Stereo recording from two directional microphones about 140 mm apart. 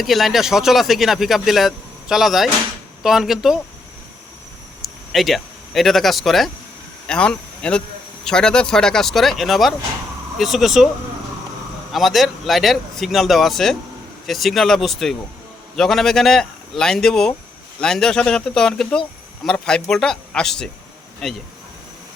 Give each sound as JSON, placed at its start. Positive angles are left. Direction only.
{"t": 0.0, "sound": "speech", "side_deg": 0}
{"t": 4.8, "sound": "speech", "side_deg": 0}
{"t": 11.9, "sound": "speech", "side_deg": 0}